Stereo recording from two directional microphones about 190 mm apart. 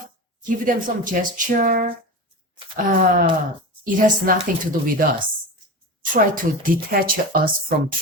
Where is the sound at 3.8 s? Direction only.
45° right (ahead or behind).